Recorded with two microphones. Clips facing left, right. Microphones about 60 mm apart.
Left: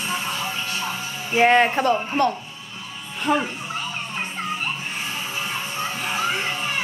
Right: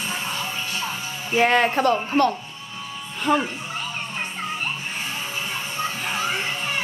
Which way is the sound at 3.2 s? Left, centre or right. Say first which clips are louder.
Right 1 dB; centre.